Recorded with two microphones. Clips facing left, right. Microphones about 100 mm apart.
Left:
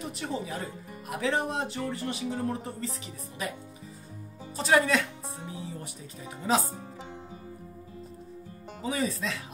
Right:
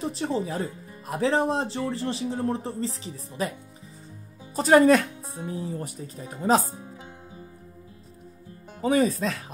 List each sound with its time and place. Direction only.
0.0 s speech: 30° right (ahead or behind)
4.6 s speech: 45° right (ahead or behind)
8.8 s speech: 50° right (ahead or behind)